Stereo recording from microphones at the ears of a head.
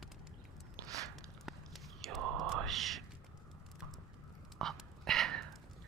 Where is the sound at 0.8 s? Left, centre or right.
Right.